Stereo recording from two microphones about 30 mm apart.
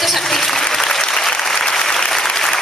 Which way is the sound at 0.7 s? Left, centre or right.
Centre.